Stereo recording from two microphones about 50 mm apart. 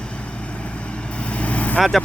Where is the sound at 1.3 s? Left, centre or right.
Left.